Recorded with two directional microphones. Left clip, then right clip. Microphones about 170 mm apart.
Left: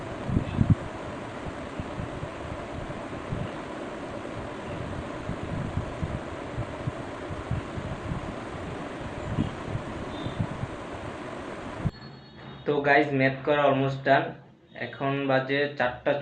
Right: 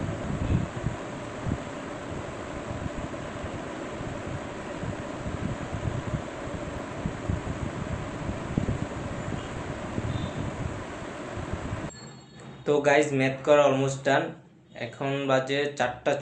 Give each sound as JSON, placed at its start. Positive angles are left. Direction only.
{"t": 12.6, "sound": "speech", "side_deg": -15}